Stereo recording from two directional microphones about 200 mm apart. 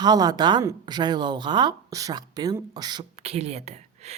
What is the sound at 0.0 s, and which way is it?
Speech, 20° right (ahead or behind).